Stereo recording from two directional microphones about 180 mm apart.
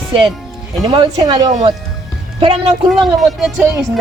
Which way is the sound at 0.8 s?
30° right (ahead or behind).